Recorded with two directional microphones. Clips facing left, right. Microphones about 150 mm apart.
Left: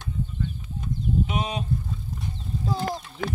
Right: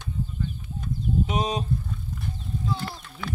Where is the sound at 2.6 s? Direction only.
40° left (ahead or behind).